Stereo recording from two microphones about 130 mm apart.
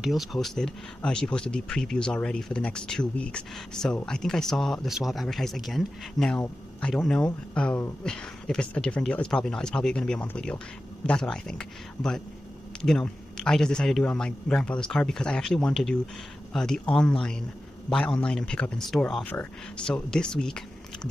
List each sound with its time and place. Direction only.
0.0 s a man's voice: centre (ahead or behind)